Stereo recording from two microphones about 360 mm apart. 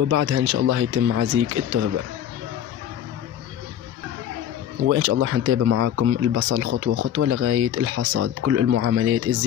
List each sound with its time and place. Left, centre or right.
0.1 s speech: right
4.8 s a man's voice: right